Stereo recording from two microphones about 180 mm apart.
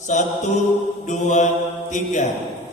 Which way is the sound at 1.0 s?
40° left (ahead or behind).